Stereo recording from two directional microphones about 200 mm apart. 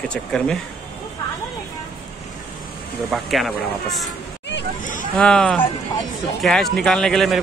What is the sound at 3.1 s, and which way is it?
Speech, centre (ahead or behind).